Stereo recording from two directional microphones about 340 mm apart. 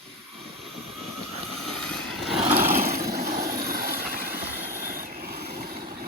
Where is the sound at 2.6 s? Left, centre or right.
Right.